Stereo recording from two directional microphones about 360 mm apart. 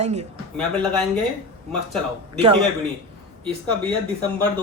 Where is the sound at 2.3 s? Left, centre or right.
Centre.